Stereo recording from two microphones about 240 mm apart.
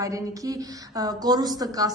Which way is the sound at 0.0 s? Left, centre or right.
Centre.